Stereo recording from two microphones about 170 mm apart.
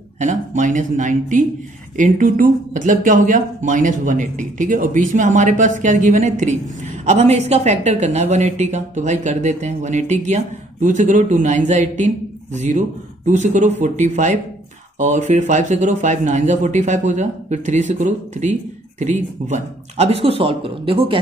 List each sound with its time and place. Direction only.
0.2 s a man's voice: 50° right (ahead or behind); by 21.2 s 30° right (ahead or behind)